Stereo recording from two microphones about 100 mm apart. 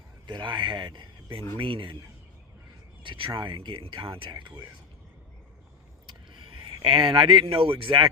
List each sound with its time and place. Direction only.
0.3 s speech: 50° right (ahead or behind)
3.0 s speech: 55° right (ahead or behind)
4.4 s speech: 25° right (ahead or behind)
6.3 s a sound: 60° right (ahead or behind)
6.7 s speech: 55° right (ahead or behind)